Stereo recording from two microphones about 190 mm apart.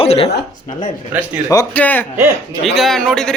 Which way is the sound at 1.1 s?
10° right (ahead or behind).